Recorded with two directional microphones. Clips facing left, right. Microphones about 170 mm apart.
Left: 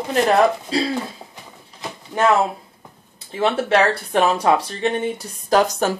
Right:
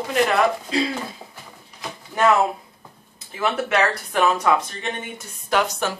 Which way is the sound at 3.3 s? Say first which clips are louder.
Left 4 dB; 30° left (ahead or behind).